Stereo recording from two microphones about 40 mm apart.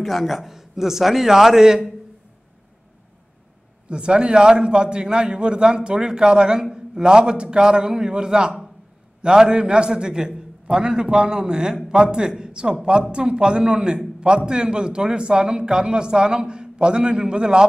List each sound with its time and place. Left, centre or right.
0.0 s a man's voice: centre
3.9 s a man's voice: right